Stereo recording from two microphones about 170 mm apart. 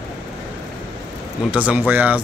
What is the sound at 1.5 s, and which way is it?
Speech, 5° right (ahead or behind).